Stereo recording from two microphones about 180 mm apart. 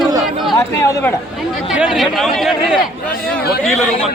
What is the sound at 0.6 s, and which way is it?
Speech, 15° left (ahead or behind).